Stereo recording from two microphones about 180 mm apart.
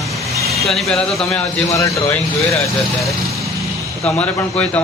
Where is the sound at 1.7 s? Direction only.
15° left (ahead or behind).